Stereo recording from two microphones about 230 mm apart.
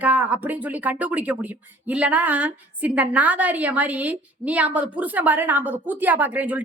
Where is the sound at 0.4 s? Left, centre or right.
Centre.